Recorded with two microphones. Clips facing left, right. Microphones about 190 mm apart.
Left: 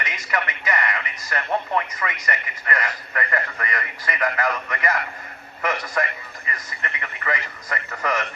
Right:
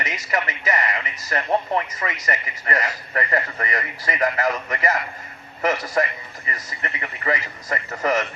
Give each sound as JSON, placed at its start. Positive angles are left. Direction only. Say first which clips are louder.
{"t": 0.0, "sound": "a man's voice", "louder": "right 2 dB", "side_deg": -25}